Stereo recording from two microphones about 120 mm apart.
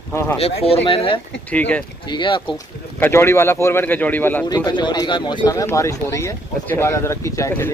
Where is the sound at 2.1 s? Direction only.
45° left (ahead or behind).